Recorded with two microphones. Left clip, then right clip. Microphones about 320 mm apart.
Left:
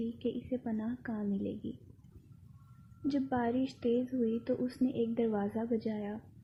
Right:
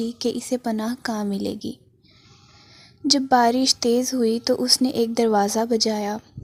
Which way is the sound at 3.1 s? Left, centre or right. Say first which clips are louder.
Right 16 dB; right.